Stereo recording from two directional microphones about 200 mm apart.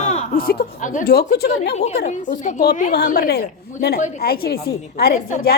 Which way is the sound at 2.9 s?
50° left (ahead or behind).